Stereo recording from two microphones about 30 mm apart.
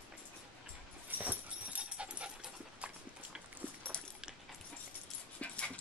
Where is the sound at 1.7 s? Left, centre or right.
Right.